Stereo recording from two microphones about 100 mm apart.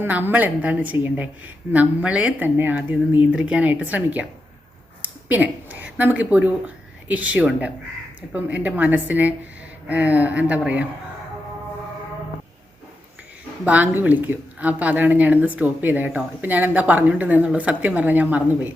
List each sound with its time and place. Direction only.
0.0 s speech: 20° right (ahead or behind)
13.7 s speech: 15° right (ahead or behind)